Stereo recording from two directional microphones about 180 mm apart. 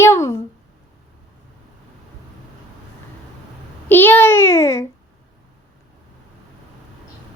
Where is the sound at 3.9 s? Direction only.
10° left (ahead or behind).